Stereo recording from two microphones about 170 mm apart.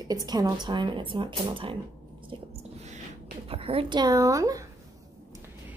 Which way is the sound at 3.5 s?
35° right (ahead or behind).